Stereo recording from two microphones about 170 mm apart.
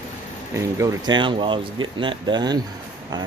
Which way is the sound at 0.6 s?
20° right (ahead or behind).